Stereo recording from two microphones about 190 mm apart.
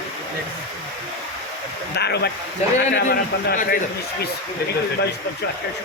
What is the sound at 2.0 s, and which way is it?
Speech, 60° left (ahead or behind).